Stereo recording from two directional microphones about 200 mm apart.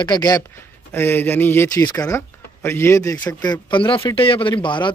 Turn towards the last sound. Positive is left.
turn(degrees=25)  # may be behind; listen again after turning